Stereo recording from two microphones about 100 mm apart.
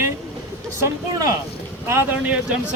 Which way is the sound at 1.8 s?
25° right (ahead or behind).